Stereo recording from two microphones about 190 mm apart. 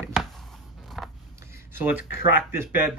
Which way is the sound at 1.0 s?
Centre (ahead or behind).